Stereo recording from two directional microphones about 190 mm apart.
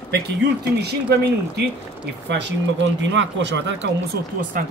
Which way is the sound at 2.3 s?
70° right (ahead or behind).